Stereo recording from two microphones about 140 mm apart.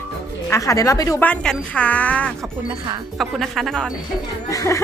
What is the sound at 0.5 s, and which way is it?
Speech, 25° left (ahead or behind).